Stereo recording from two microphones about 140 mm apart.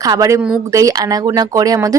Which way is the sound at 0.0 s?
25° right (ahead or behind).